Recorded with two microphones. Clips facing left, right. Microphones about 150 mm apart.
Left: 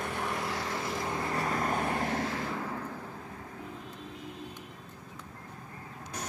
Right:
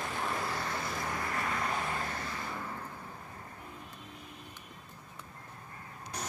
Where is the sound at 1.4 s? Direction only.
45° left (ahead or behind); by 2.8 s 90° left.